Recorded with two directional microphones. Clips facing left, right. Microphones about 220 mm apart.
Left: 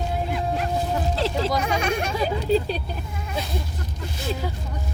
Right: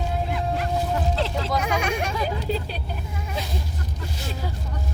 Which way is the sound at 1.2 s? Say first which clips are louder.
Left 2 dB; 35° left (ahead or behind).